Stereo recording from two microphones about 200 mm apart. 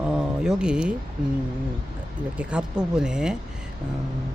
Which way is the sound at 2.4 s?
5° right (ahead or behind).